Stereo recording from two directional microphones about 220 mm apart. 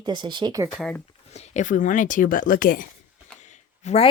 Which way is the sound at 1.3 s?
30° left (ahead or behind).